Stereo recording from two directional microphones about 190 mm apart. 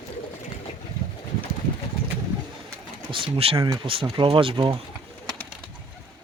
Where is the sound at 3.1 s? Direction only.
30° right (ahead or behind).